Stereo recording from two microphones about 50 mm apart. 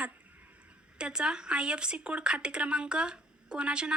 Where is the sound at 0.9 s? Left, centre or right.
Centre.